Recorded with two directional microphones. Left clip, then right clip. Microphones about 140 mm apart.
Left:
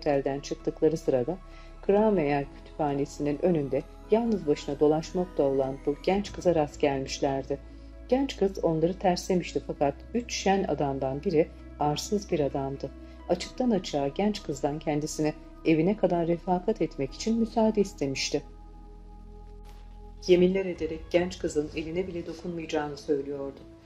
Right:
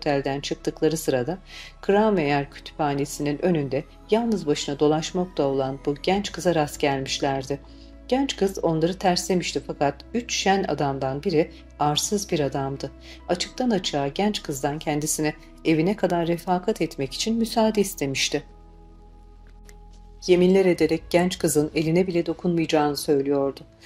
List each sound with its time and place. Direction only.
0.0 s speech: 35° right (ahead or behind)
20.2 s speech: 35° right (ahead or behind)